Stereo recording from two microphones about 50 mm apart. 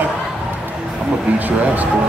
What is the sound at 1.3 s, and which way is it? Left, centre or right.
Speech, right.